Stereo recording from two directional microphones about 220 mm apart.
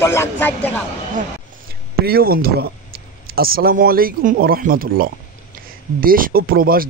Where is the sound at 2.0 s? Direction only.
45° right (ahead or behind).